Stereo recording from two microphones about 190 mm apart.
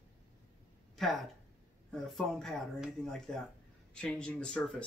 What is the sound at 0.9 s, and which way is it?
Speech, centre (ahead or behind).